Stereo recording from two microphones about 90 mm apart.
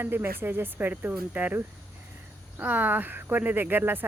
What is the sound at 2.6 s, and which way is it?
Speech, 20° right (ahead or behind).